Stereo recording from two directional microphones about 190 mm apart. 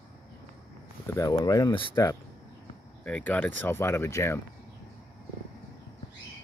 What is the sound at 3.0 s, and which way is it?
Speech, 10° left (ahead or behind).